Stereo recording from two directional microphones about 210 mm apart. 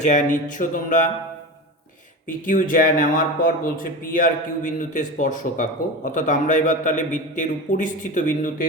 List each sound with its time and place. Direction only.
0.0 s speech: 35° left (ahead or behind)
2.2 s speech: 40° left (ahead or behind)